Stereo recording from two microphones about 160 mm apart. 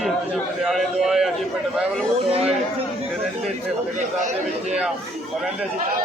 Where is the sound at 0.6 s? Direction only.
Centre (ahead or behind).